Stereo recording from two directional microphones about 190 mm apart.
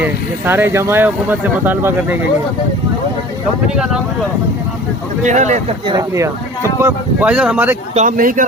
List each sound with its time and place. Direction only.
0.0 s speech: 10° right (ahead or behind)
5.2 s speech: 40° right (ahead or behind)
5.8 s speech: 20° right (ahead or behind)
7.9 s speech: 45° right (ahead or behind)